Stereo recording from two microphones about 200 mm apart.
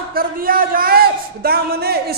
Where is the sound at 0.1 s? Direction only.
45° right (ahead or behind).